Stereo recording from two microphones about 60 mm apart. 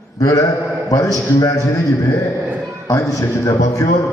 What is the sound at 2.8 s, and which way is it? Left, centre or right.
A man's voice, left.